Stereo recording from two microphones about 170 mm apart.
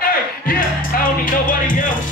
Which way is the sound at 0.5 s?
55° left (ahead or behind).